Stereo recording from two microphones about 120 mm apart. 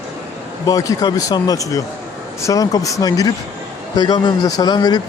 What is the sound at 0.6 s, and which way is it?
Speech, 30° left (ahead or behind).